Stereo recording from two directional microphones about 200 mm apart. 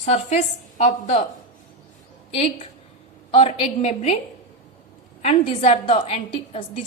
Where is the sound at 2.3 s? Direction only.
30° left (ahead or behind).